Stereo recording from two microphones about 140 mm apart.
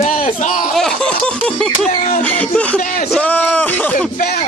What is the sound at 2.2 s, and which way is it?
Speech, 10° left (ahead or behind).